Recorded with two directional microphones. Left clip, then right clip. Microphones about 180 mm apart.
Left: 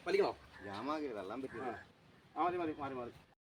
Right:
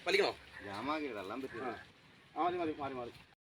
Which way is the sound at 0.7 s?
35° right (ahead or behind).